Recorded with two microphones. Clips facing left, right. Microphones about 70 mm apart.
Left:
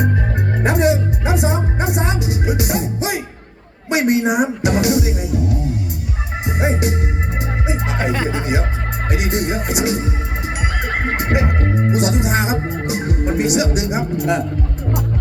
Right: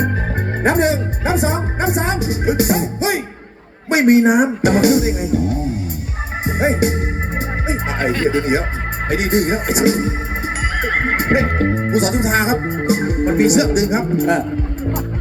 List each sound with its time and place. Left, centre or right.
0.6 s music: right
3.8 s a woman's voice: right
6.6 s speech: right
7.9 s speech: centre
9.0 s speech: right
11.2 s speech: right